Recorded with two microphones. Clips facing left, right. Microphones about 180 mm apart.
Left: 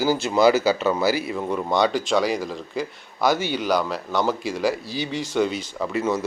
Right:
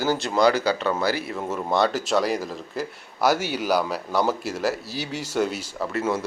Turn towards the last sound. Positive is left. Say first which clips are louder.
# left 2 dB
turn(degrees=-5)  # may be behind; listen again after turning